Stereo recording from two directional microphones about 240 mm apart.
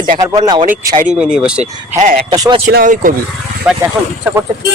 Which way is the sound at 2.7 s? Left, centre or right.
Right.